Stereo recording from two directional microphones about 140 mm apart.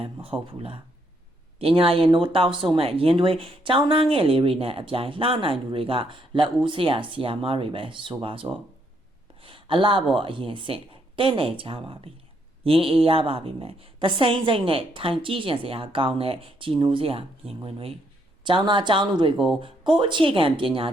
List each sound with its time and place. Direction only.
0.0 s a woman's voice: 40° right (ahead or behind)
9.4 s a sound: 40° right (ahead or behind)
10.2 s a woman's voice: 40° right (ahead or behind)